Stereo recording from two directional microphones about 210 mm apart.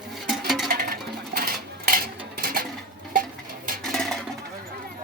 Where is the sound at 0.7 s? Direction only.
45° right (ahead or behind).